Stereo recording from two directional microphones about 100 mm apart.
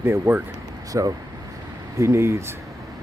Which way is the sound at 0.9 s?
35° right (ahead or behind).